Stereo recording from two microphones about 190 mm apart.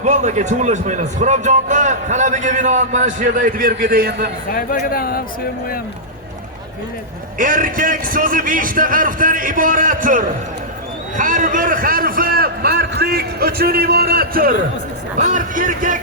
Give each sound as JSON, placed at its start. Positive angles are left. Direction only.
{"t": 0.0, "sound": "a man's voice", "side_deg": -40}
{"t": 4.5, "sound": "speech", "side_deg": 50}
{"t": 7.3, "sound": "a man's voice", "side_deg": -45}
{"t": 15.2, "sound": "a man's voice", "side_deg": -40}